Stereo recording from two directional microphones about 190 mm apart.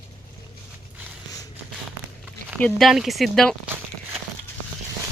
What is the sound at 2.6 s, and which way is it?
Speech, 5° left (ahead or behind).